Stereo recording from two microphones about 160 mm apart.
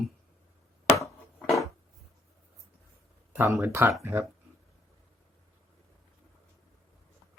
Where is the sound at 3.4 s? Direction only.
20° right (ahead or behind).